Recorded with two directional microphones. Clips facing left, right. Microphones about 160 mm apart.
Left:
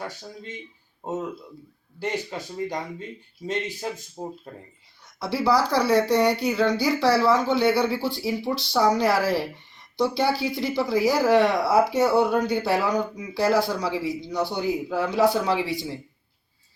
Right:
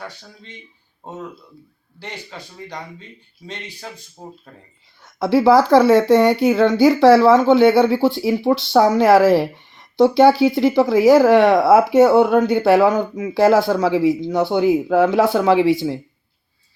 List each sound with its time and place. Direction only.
2.0 s speech: 45° left (ahead or behind)
4.2 s speech: 20° left (ahead or behind)
5.0 s speech: 55° right (ahead or behind); by 13.3 s 90° right
13.4 s speech: 55° right (ahead or behind)